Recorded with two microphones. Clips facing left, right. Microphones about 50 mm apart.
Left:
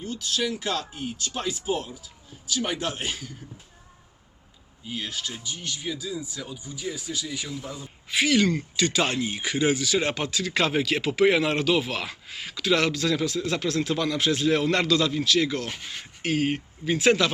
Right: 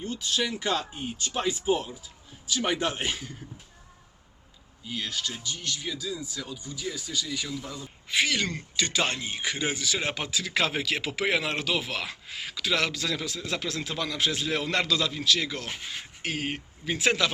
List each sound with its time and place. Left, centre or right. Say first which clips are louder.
0.3 s speech: even; right
4.9 s speech: even; centre